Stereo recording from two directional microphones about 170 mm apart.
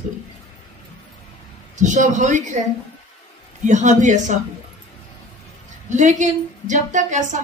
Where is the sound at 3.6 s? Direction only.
45° right (ahead or behind).